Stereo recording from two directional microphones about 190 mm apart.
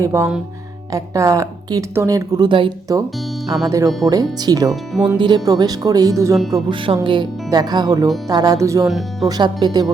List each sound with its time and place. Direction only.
0.0 s speech: 15° right (ahead or behind)